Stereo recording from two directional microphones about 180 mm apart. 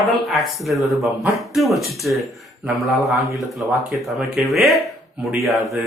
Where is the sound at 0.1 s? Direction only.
Centre (ahead or behind).